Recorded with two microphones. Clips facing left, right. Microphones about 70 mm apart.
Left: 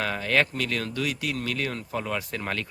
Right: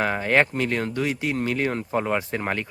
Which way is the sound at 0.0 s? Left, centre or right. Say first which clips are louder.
Right 4 dB; right.